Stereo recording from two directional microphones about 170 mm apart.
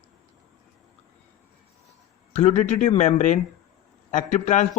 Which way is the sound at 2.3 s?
40° left (ahead or behind).